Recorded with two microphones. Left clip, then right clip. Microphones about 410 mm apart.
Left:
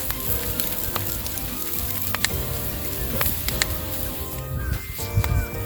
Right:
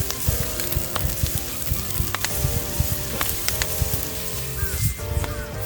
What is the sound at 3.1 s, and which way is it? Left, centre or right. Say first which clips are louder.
Sizzle: left 1 dB; centre.